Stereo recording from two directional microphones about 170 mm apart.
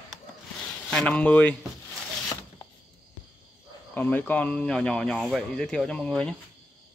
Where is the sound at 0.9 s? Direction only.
5° left (ahead or behind).